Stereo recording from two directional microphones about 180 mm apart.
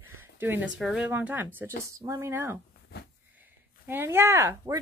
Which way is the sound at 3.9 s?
10° right (ahead or behind).